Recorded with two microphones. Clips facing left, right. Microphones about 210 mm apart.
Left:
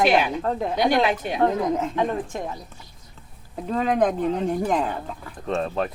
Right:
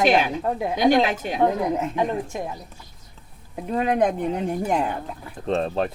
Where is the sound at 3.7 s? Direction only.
15° right (ahead or behind).